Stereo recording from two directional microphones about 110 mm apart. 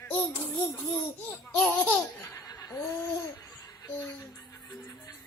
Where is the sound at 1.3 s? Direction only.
15° left (ahead or behind).